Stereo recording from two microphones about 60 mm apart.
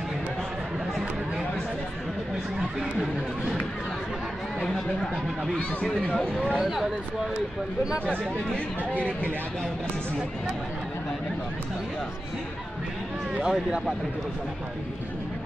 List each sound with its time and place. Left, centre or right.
2.8 s speech: centre
4.6 s speech: centre
6.6 s speech: centre
13.4 s speech: centre